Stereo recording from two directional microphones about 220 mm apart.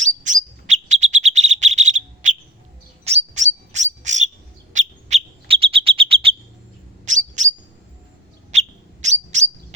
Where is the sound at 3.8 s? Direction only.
55° right (ahead or behind).